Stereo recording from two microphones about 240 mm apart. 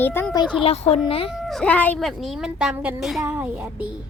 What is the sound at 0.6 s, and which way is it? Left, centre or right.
Speech, left.